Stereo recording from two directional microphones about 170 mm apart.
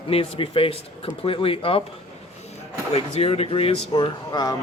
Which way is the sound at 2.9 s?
35° left (ahead or behind).